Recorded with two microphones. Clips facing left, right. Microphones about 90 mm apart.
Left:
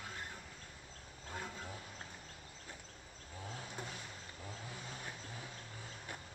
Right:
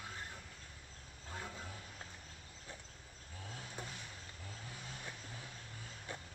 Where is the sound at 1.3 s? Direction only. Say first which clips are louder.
Left 1 dB; 10° left (ahead or behind).